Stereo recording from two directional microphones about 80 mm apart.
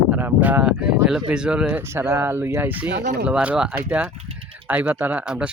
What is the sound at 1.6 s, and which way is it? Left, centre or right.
Speech, right.